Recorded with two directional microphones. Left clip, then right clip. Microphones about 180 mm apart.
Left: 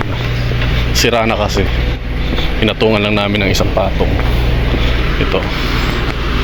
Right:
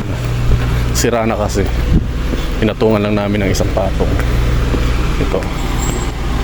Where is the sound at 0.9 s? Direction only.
25° right (ahead or behind).